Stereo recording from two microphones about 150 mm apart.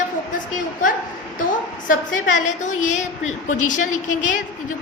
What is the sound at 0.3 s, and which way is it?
A woman's voice, 60° left (ahead or behind).